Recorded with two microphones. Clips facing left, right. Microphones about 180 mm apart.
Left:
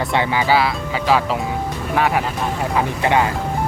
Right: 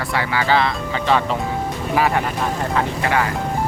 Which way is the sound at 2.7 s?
20° left (ahead or behind).